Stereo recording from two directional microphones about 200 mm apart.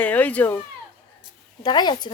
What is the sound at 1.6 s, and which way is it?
Speech, 20° left (ahead or behind).